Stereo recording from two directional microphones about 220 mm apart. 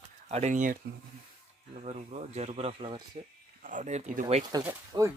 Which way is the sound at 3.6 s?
35° right (ahead or behind).